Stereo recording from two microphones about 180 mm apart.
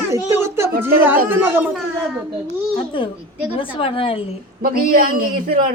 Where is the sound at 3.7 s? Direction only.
30° left (ahead or behind).